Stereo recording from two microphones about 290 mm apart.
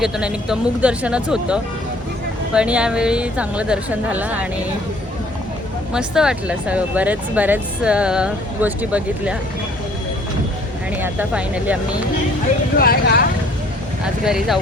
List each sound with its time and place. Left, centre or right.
0.0 s speech: centre
5.9 s speech: centre
10.9 s speech: centre
12.7 s speech: left
14.0 s speech: centre